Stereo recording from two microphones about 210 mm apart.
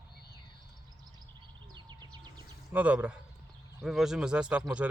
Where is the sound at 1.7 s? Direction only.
20° right (ahead or behind).